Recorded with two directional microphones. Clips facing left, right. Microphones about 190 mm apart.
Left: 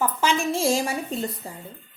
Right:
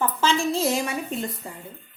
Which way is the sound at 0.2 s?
15° left (ahead or behind).